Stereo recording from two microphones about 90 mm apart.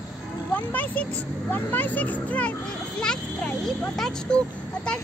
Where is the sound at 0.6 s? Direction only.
20° left (ahead or behind).